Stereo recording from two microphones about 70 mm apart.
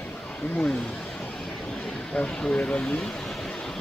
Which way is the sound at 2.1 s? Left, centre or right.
Centre.